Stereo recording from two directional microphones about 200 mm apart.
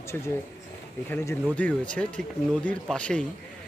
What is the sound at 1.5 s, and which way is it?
Speech, 5° left (ahead or behind).